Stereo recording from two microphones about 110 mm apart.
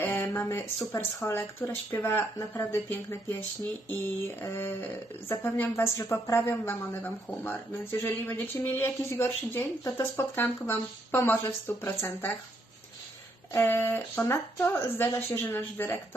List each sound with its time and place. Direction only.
0.0 s a sound: 20° left (ahead or behind)
1.3 s a woman's voice: 20° left (ahead or behind)
13.5 s a woman's voice: 20° left (ahead or behind)